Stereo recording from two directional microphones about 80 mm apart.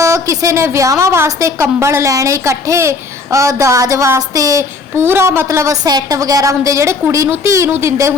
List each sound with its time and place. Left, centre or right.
0.0 s a woman's voice: right
5.0 s a woman's voice: right